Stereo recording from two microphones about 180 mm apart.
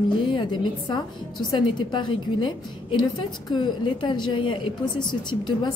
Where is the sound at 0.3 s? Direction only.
25° left (ahead or behind).